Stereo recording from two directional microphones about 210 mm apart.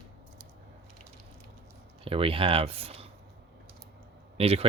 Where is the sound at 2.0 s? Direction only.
25° right (ahead or behind).